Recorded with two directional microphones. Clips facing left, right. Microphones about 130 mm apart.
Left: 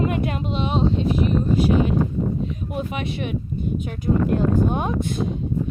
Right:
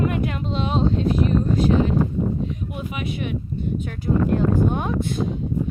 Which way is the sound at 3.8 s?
20° left (ahead or behind).